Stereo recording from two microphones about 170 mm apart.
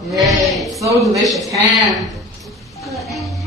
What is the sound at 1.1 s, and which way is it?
Speech, centre (ahead or behind).